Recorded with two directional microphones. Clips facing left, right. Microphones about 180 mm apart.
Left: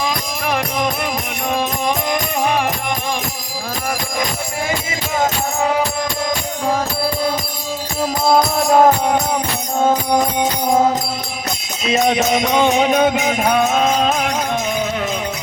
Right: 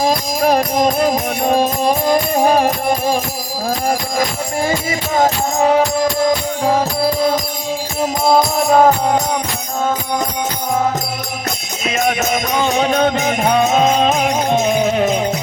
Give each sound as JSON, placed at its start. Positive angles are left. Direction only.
{"t": 0.0, "sound": "music", "side_deg": -35}
{"t": 8.0, "sound": "music", "side_deg": -20}
{"t": 8.6, "sound": "music", "side_deg": 0}
{"t": 11.9, "sound": "music", "side_deg": 25}
{"t": 13.6, "sound": "music", "side_deg": -15}
{"t": 14.0, "sound": "music", "side_deg": -5}
{"t": 14.5, "sound": "music", "side_deg": -25}